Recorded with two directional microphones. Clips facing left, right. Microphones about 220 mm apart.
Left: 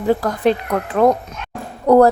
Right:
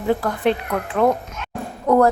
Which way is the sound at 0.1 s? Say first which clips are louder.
Left 3 dB; 40° left (ahead or behind).